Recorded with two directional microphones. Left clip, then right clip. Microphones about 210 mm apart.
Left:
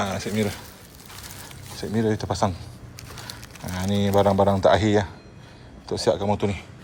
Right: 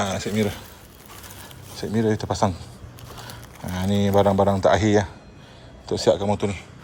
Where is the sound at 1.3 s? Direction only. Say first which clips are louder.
Left 1 dB; 15° right (ahead or behind).